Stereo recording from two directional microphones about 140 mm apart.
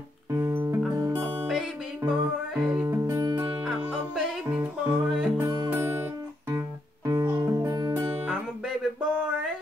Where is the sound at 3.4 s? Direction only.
10° right (ahead or behind).